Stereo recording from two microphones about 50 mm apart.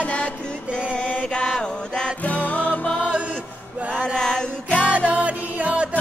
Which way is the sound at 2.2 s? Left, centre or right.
Left.